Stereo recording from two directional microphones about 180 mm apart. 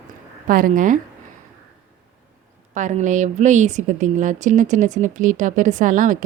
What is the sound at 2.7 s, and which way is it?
Speech, 40° right (ahead or behind).